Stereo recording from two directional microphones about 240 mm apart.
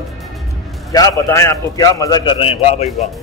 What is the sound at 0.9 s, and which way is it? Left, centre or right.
A man's voice, centre.